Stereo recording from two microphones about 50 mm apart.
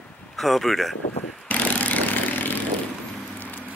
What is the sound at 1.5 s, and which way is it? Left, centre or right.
Vehicle, left.